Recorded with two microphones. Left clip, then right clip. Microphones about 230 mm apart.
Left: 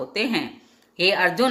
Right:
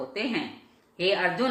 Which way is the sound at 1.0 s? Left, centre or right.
Left.